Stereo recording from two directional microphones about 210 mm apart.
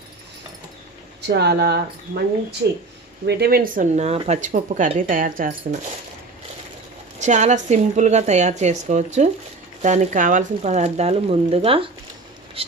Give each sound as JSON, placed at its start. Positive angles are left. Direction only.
{"t": 1.3, "sound": "speech", "side_deg": -50}
{"t": 7.2, "sound": "speech", "side_deg": -35}
{"t": 12.6, "sound": "a sound", "side_deg": -30}